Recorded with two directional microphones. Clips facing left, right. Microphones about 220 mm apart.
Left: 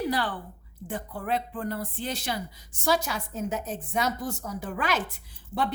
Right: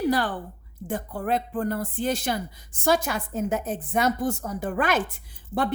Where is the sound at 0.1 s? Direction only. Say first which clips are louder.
Right 4 dB; 45° right (ahead or behind).